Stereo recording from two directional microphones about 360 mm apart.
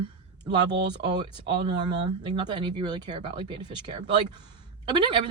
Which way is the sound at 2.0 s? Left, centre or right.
Centre.